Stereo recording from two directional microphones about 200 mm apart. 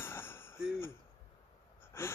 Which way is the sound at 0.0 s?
10° left (ahead or behind).